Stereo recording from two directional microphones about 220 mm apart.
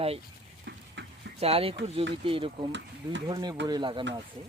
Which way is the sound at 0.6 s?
55° right (ahead or behind).